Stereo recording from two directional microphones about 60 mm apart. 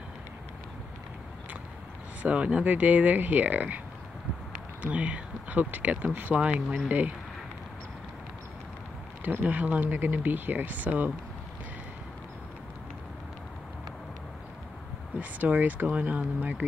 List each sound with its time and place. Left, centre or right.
2.2 s speech: right
4.8 s speech: right
9.2 s speech: right
15.1 s speech: right